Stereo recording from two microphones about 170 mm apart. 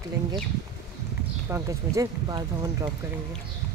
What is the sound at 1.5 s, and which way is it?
Speech, 20° right (ahead or behind).